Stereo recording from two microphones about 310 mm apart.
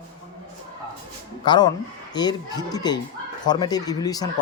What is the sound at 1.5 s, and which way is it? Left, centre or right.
Speech, centre.